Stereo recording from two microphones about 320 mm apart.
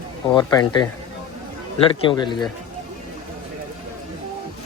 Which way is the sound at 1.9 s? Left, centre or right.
Centre.